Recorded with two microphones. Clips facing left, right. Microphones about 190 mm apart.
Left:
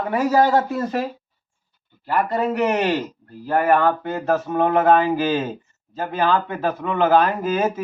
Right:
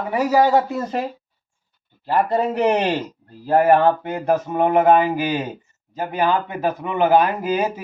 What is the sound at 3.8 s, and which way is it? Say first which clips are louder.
A man's voice: right 2 dB; 15° right (ahead or behind).